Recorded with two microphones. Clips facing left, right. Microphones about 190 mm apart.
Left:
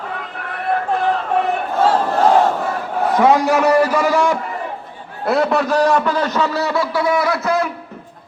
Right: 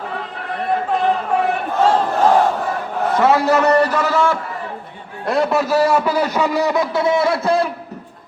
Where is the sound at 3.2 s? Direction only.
15° left (ahead or behind).